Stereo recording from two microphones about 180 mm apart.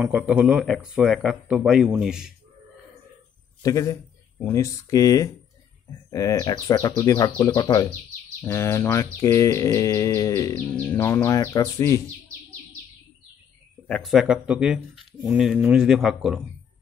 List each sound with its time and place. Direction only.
0.0 s speech: 5° right (ahead or behind)
3.6 s speech: 20° left (ahead or behind)
8.4 s bird: 15° left (ahead or behind)
13.8 s speech: centre (ahead or behind)